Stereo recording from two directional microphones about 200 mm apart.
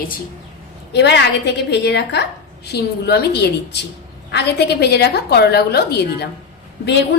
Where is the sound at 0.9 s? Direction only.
55° left (ahead or behind).